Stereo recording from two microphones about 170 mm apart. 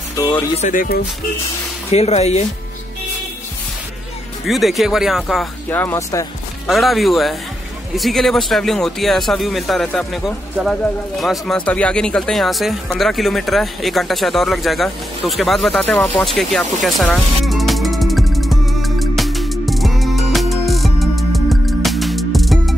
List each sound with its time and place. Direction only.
0.1 s music: 20° left (ahead or behind)
0.6 s speech: 50° left (ahead or behind)
1.9 s speech: 40° left (ahead or behind)
4.5 s speech: centre (ahead or behind)
5.7 s speech: 10° left (ahead or behind)
6.7 s speech: centre (ahead or behind)
17.5 s music: centre (ahead or behind)